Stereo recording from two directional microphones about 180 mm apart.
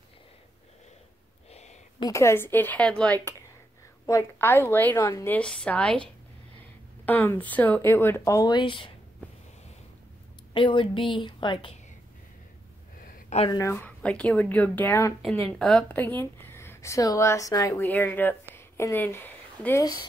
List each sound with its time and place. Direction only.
1.5 s a sound: 40° left (ahead or behind)
2.0 s a woman's voice: 20° left (ahead or behind)
4.0 s a woman's voice: 15° left (ahead or behind)
7.1 s a woman's voice: 10° left (ahead or behind); by 8.9 s 30° left (ahead or behind)
10.5 s a woman's voice: 30° left (ahead or behind)
13.5 s a woman's voice: 15° left (ahead or behind)